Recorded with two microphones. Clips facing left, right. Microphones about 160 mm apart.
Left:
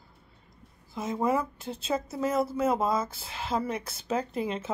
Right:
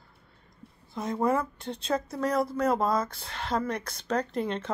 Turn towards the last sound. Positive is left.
turn(degrees=5)  # may be behind; listen again after turning